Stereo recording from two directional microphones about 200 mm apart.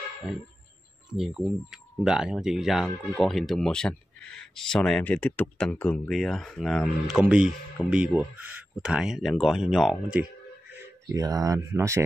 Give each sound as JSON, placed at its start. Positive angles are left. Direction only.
{"t": 1.1, "sound": "speech", "side_deg": -5}
{"t": 11.1, "sound": "speech", "side_deg": -15}